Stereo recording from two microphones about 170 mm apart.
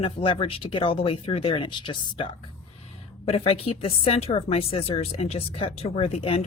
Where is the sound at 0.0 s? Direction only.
30° left (ahead or behind).